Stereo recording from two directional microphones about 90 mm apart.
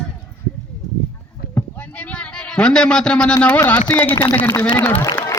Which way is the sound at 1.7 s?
15° left (ahead or behind).